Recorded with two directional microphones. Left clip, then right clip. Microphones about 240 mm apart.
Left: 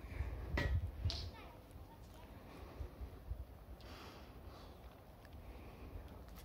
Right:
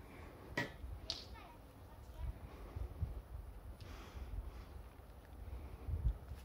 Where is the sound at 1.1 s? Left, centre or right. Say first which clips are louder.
Right 2 dB; right.